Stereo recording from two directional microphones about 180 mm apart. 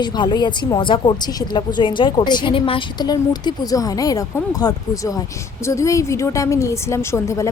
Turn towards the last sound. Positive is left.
turn(degrees=15)  # may be behind; listen again after turning